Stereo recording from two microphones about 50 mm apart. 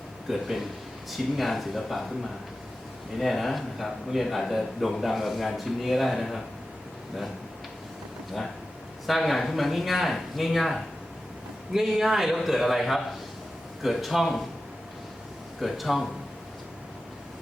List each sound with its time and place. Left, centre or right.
0.3 s speech: centre
9.0 s speech: centre
15.6 s speech: centre